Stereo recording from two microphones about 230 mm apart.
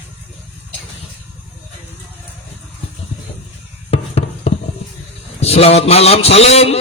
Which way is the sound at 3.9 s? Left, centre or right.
Left.